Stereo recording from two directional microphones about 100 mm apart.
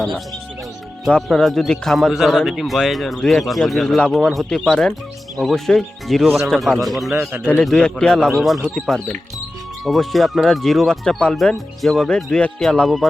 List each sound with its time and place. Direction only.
1.1 s a man's voice: 5° left (ahead or behind)
7.1 s a man's voice: 25° right (ahead or behind)
7.4 s a man's voice: 10° left (ahead or behind)
8.7 s speech: 30° right (ahead or behind)
9.8 s a man's voice: centre (ahead or behind)